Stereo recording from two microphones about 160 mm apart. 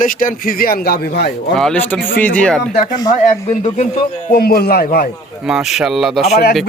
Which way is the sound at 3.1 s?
50° left (ahead or behind).